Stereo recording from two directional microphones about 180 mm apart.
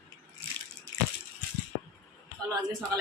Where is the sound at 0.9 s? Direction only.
90° right.